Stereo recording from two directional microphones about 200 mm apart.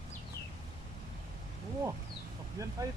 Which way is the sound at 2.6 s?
15° right (ahead or behind).